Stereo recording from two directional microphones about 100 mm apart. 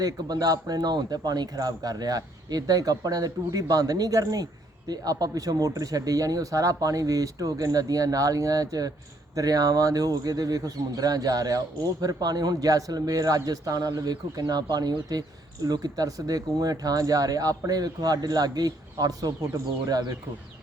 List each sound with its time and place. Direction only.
0.0 s speech: 40° right (ahead or behind)